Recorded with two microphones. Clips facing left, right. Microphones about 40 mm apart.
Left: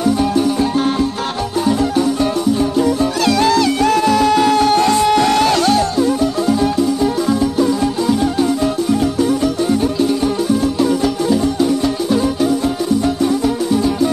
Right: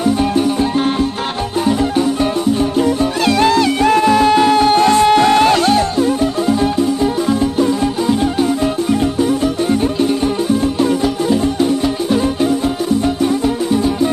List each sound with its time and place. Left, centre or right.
2.8 s music: right